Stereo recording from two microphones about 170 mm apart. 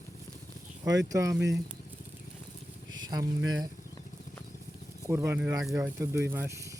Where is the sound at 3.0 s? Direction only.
25° right (ahead or behind).